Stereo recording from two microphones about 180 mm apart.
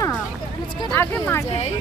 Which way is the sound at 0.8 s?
10° left (ahead or behind).